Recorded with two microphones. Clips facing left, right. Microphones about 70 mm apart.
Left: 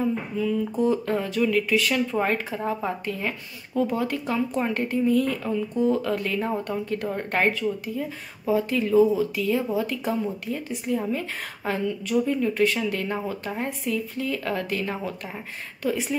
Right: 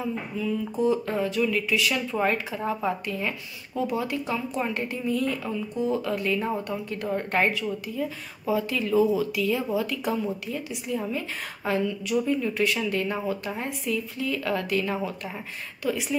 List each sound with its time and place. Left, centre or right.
0.0 s a woman's voice: left